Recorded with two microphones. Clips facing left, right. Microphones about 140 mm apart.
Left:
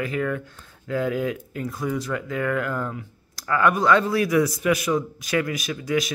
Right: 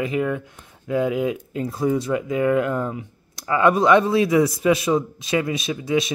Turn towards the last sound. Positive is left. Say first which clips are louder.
# right 3 dB
turn(degrees=-25)  # may be behind; listen again after turning